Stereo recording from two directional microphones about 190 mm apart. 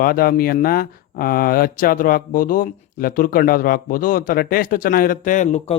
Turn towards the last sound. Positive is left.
turn(degrees=40)  # may be behind; listen again after turning